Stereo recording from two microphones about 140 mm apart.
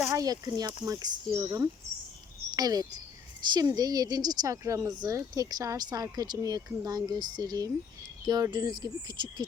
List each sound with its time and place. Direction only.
0.0 s a woman's voice: 25° right (ahead or behind)